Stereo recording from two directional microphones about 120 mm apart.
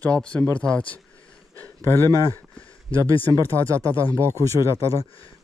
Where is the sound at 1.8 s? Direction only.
20° left (ahead or behind).